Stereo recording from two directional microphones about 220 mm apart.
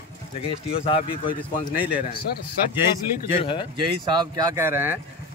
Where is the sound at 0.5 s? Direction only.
25° left (ahead or behind).